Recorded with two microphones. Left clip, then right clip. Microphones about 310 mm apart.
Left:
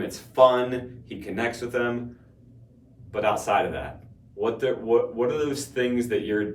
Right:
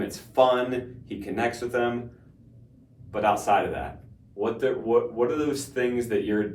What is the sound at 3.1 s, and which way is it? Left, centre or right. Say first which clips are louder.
Speech: right 1 dB; centre.